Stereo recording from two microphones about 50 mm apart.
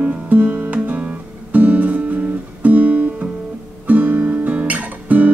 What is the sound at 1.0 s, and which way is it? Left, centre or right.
Guitar, right.